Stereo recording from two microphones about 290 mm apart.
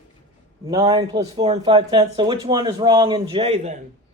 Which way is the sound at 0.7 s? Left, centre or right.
Centre.